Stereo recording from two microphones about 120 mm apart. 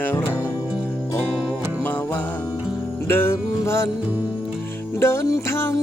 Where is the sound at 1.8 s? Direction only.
15° left (ahead or behind).